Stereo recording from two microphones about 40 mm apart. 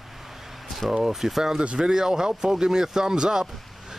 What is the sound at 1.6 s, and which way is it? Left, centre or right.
Speech, right.